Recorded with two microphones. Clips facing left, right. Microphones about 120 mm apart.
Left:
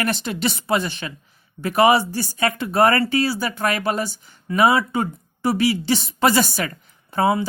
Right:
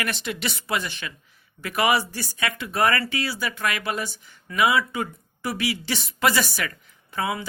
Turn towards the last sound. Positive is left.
turn(degrees=35)  # may be behind; listen again after turning